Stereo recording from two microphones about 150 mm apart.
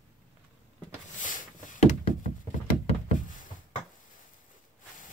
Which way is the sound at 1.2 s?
60° left (ahead or behind).